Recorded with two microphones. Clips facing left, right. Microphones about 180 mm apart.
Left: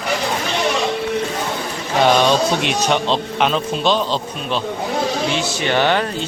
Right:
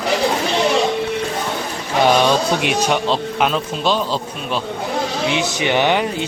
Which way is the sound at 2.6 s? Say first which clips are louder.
Even; 5° right (ahead or behind).